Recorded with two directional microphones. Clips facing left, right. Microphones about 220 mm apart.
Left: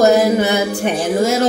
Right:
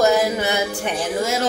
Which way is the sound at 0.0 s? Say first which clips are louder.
Left 6 dB; 40° left (ahead or behind).